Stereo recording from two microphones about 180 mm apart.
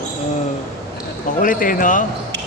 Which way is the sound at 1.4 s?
50° left (ahead or behind).